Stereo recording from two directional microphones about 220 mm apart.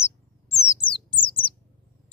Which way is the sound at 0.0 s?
10° left (ahead or behind).